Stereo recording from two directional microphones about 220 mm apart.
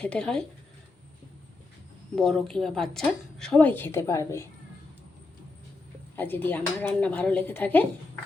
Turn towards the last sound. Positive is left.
turn(degrees=5)  # may be behind; listen again after turning